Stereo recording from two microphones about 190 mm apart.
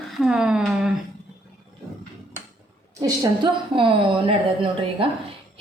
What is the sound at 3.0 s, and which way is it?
A woman's voice, 20° right (ahead or behind).